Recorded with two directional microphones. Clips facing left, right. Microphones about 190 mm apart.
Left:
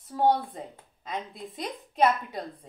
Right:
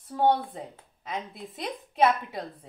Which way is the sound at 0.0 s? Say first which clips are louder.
Even; centre (ahead or behind).